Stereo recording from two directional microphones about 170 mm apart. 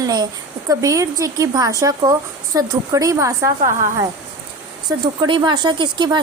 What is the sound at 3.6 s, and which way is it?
Speech, 50° right (ahead or behind).